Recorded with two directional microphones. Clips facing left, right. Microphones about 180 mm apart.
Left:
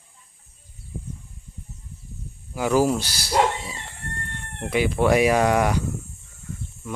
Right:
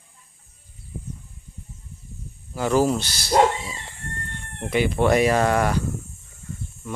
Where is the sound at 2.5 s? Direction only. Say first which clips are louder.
Even; 10° left (ahead or behind).